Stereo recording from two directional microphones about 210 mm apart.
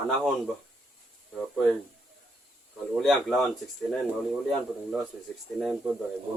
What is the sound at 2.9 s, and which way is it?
Speech, centre (ahead or behind).